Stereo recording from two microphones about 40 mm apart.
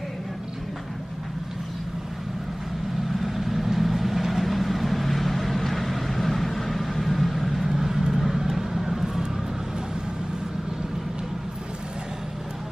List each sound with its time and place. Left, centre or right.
3.1 s vehicle: centre
9.0 s vehicle: centre